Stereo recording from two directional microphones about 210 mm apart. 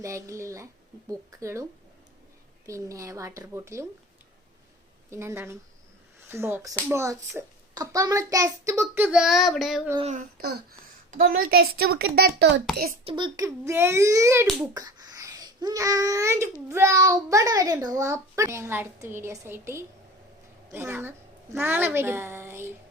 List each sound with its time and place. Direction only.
0.0 s a child's voice: 15° right (ahead or behind)
2.6 s a child's voice: 15° right (ahead or behind)
5.1 s a child's voice: 10° right (ahead or behind)
10.0 s a child's voice: 35° right (ahead or behind)
13.1 s a child's voice: 20° right (ahead or behind)